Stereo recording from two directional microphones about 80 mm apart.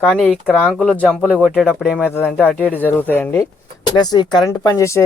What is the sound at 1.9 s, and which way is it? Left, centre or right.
Speech, left.